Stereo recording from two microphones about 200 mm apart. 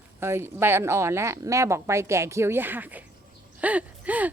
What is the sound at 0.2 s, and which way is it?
A woman's voice, 10° right (ahead or behind).